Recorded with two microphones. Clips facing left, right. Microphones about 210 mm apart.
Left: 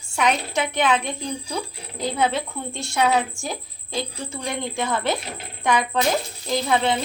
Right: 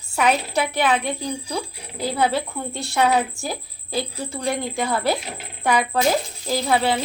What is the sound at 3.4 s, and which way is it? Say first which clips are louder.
A woman's voice: right 1 dB; 5° right (ahead or behind).